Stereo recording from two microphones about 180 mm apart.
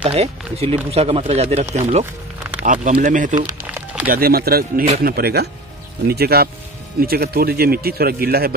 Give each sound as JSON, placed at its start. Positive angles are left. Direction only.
{"t": 0.0, "sound": "speech", "side_deg": -35}
{"t": 4.1, "sound": "speech", "side_deg": -55}